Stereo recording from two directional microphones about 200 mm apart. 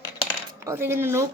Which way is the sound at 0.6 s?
15° right (ahead or behind).